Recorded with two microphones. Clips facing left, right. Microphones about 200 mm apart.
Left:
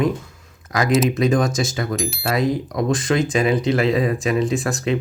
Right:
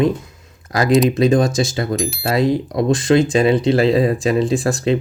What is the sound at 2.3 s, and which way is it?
Speech, 30° right (ahead or behind).